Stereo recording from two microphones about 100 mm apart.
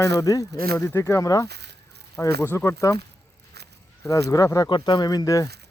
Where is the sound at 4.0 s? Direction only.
30° left (ahead or behind).